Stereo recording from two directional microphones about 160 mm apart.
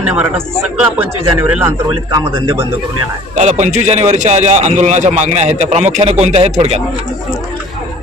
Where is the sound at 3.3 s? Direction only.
45° right (ahead or behind).